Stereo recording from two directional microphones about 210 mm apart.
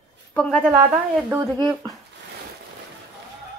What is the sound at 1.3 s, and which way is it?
Speech, 20° right (ahead or behind).